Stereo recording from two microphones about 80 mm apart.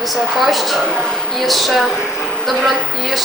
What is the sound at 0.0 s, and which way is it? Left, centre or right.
A woman's voice, centre.